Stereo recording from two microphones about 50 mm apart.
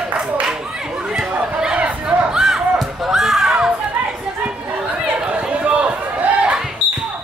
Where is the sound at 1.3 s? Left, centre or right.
Right.